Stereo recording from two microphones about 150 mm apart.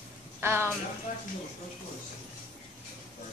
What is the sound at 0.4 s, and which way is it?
Speech, 15° right (ahead or behind).